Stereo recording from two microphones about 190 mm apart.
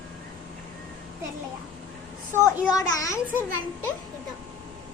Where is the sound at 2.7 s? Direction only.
20° left (ahead or behind).